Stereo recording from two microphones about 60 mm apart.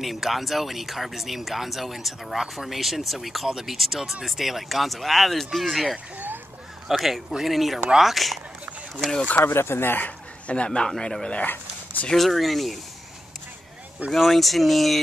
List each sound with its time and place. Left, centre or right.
0.0 s speech: centre
6.1 s a sound: right
6.9 s speech: centre
9.5 s speech: left; by 11.4 s centre
11.4 s a sound: left
12.1 s speech: centre
14.1 s speech: centre